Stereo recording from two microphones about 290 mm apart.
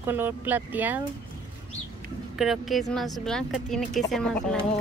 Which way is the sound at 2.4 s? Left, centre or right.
Centre.